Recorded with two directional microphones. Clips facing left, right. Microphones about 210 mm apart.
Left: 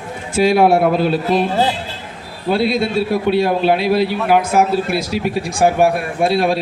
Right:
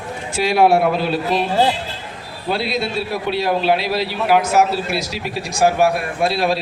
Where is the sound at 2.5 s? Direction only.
50° left (ahead or behind).